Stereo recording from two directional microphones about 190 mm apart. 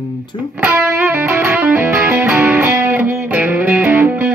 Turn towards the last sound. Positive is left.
turn(degrees=-10)  # may be behind; listen again after turning